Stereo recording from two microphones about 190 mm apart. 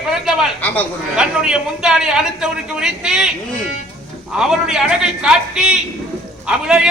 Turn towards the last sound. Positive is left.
turn(degrees=-5)  # may be behind; listen again after turning